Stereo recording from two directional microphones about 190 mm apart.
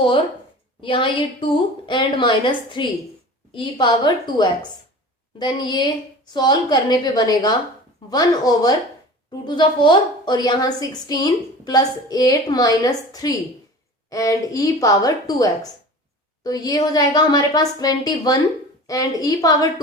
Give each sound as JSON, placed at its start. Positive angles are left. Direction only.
{"t": 0.8, "sound": "a woman's voice", "side_deg": 25}